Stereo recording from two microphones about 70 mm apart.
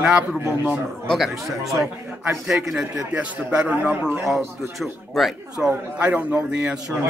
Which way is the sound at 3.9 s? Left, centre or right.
Right.